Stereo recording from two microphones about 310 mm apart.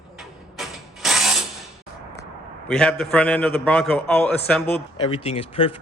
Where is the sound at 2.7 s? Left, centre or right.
Centre.